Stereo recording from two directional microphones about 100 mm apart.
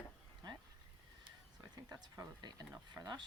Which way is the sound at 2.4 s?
45° right (ahead or behind).